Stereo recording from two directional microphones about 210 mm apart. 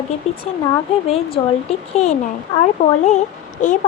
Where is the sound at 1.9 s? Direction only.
30° left (ahead or behind).